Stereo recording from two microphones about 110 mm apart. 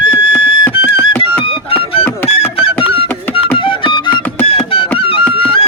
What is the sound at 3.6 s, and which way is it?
Music, 50° left (ahead or behind).